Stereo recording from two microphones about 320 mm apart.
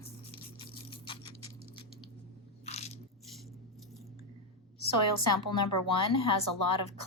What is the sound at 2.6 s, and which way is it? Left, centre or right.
Biting, centre.